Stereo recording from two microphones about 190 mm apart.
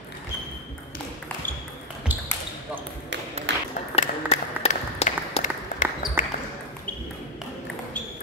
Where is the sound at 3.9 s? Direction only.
35° left (ahead or behind).